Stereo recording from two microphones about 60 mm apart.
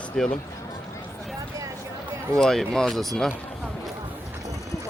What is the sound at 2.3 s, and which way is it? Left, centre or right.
Speech, centre.